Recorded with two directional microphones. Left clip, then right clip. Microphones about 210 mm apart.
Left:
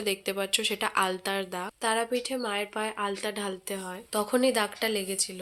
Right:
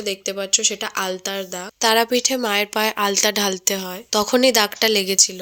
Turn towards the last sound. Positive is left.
turn(degrees=-40)  # may be behind; listen again after turning